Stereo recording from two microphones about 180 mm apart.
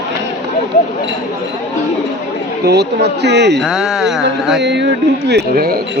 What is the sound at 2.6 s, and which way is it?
Speech, 65° right (ahead or behind).